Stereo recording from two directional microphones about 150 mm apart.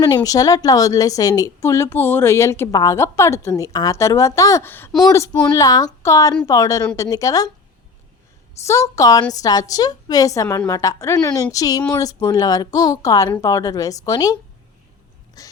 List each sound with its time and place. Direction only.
0.3 s a woman's voice: 25° left (ahead or behind)
8.6 s a woman's voice: 20° left (ahead or behind)
15.4 s a sound: 25° left (ahead or behind)